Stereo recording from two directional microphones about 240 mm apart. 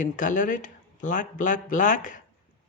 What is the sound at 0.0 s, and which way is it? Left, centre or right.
Speech, left.